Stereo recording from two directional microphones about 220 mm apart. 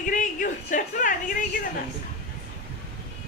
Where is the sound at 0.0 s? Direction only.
35° left (ahead or behind).